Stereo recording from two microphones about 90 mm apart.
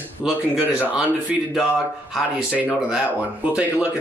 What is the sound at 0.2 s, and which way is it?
Speech, 5° right (ahead or behind).